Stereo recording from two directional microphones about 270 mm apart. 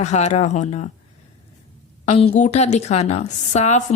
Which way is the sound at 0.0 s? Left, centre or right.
Left.